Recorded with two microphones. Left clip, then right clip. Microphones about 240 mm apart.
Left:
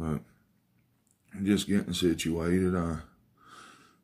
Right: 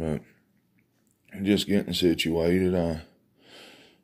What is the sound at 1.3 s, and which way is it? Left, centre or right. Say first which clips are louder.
Speech: right 4 dB; centre.